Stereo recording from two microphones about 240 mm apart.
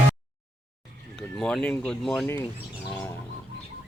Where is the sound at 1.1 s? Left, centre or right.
Centre.